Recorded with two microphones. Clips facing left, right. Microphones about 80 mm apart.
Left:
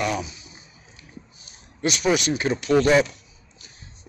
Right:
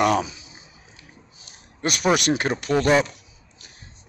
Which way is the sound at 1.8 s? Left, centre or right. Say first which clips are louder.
Right 1 dB; right.